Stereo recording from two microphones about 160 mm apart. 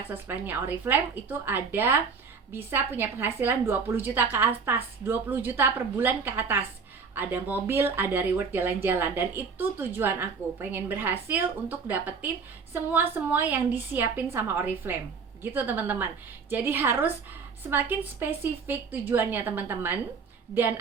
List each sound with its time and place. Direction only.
0.1 s speech: 15° right (ahead or behind)